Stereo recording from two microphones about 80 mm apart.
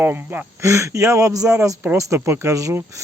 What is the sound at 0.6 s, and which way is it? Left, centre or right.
Speech, right.